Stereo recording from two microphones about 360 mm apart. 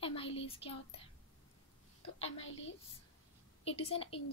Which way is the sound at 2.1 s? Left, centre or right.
Centre.